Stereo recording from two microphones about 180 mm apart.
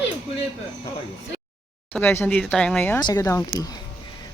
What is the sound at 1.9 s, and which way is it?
Speech, 10° left (ahead or behind).